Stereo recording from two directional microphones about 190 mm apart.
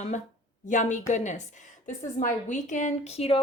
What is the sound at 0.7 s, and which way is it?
A woman's voice, 40° left (ahead or behind).